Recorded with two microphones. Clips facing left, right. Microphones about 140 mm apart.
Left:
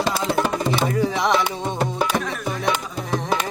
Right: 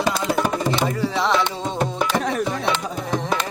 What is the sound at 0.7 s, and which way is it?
Music, 10° left (ahead or behind).